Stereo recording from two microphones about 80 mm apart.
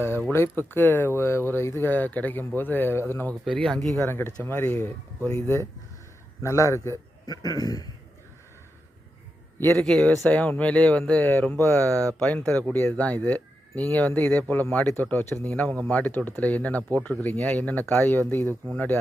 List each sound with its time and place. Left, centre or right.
0.3 s speech: left
3.4 s speech: centre
4.0 s a man's voice: left
7.3 s a man's voice: left
9.8 s speech: centre
10.2 s speech: centre
12.7 s speech: left